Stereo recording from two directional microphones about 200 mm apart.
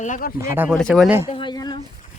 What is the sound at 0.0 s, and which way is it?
Speech, 40° left (ahead or behind).